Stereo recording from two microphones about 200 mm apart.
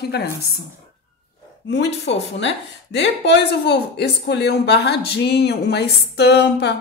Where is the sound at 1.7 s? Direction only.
60° left (ahead or behind).